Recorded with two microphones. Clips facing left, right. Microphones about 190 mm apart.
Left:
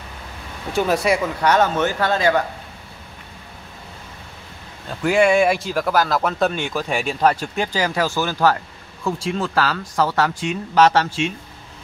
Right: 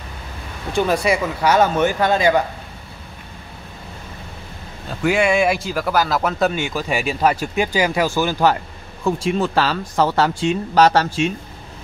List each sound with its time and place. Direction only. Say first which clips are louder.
0.7 s speech: right 1 dB; centre (ahead or behind); by 2.4 s 15° right (ahead or behind)
5.0 s speech: left 1 dB; centre (ahead or behind); by 11.3 s 40° right (ahead or behind)